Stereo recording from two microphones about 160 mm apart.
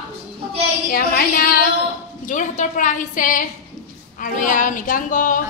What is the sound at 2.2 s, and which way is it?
A woman's voice, 50° left (ahead or behind).